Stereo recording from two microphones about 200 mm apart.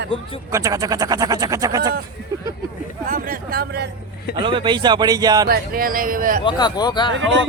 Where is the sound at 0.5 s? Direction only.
15° right (ahead or behind).